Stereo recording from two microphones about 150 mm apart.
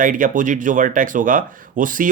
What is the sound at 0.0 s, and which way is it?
Speech, 60° right (ahead or behind).